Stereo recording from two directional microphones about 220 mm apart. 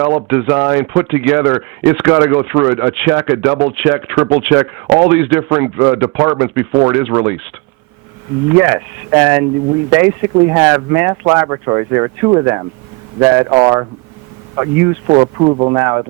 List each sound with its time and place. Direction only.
0.3 s speech: 10° right (ahead or behind)
8.5 s speech: 10° right (ahead or behind)